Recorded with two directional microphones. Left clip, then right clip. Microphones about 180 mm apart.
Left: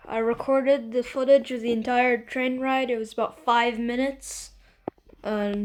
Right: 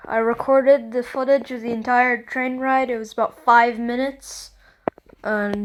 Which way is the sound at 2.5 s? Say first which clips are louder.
Right 7 dB; 10° right (ahead or behind).